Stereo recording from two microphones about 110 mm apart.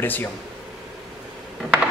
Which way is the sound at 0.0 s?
20° left (ahead or behind).